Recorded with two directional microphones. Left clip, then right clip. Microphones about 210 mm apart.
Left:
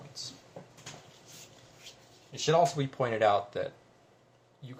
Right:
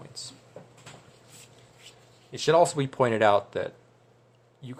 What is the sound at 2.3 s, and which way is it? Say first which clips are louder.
Speech: right 5 dB; 55° right (ahead or behind).